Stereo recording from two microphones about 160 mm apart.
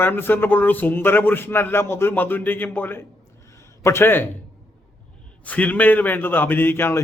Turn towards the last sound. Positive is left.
turn(degrees=15)  # may be behind; listen again after turning